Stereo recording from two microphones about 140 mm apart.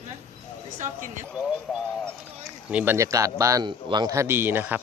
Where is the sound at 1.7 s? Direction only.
Centre (ahead or behind).